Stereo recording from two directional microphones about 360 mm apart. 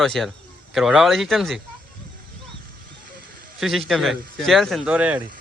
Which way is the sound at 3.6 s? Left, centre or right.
Centre.